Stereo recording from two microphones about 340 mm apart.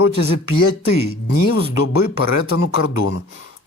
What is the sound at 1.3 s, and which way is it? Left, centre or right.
Speech, left.